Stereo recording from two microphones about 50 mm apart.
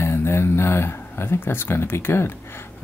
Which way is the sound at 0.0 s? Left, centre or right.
Left.